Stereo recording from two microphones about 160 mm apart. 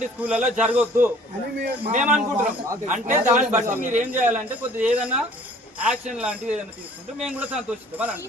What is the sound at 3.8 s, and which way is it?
Speech, 50° right (ahead or behind).